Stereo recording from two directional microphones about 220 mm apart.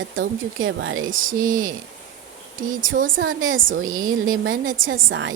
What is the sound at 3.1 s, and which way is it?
Speech, 65° right (ahead or behind).